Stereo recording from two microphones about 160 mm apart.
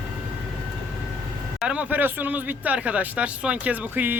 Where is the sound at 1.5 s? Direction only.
5° right (ahead or behind).